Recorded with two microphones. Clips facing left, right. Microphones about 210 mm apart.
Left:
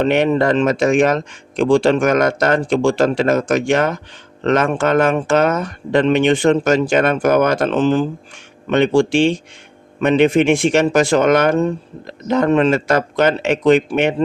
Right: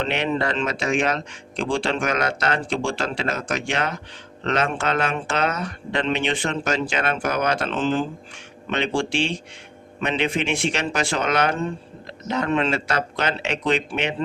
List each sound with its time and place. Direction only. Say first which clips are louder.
0.0 s speech: left 9 dB; 45° left (ahead or behind)